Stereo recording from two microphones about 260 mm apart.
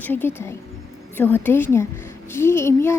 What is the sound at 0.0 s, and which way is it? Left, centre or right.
A woman's voice, centre.